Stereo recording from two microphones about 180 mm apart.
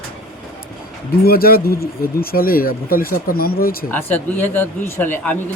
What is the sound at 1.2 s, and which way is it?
Speech, 55° left (ahead or behind).